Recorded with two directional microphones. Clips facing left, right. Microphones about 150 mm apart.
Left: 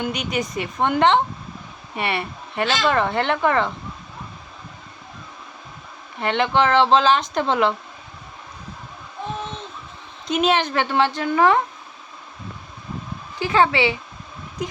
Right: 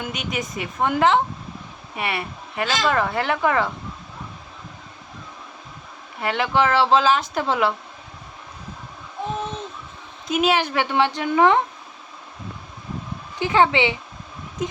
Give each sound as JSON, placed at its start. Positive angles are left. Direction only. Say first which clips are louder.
{"t": 0.0, "sound": "speech", "louder": "left 4 dB", "side_deg": 0}
{"t": 6.1, "sound": "speech", "louder": "left 1 dB", "side_deg": -5}
{"t": 10.2, "sound": "a woman's voice", "louder": "left 1 dB", "side_deg": -5}
{"t": 13.4, "sound": "speech", "louder": "even", "side_deg": -20}